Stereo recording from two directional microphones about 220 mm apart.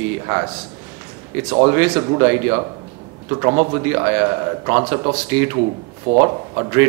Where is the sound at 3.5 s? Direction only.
25° right (ahead or behind).